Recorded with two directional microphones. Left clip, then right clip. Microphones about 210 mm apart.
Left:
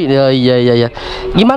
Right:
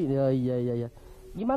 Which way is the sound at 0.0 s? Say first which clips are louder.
Left 16 dB; 5° left (ahead or behind).